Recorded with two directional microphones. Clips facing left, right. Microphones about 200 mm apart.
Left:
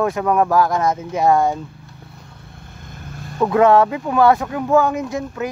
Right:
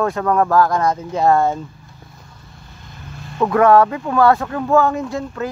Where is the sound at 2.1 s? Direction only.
60° left (ahead or behind).